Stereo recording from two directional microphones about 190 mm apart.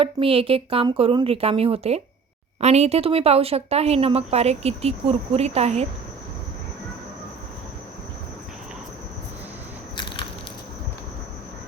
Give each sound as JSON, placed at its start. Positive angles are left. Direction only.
{"t": 0.0, "sound": "a woman's voice", "side_deg": -30}